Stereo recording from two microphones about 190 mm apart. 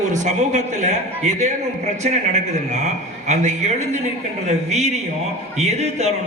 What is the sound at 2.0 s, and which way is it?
A man's voice, 40° right (ahead or behind).